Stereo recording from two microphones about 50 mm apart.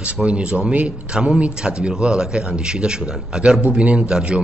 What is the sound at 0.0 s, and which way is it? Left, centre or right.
A man's voice, right.